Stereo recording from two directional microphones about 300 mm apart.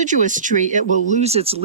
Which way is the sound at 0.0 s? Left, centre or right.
Right.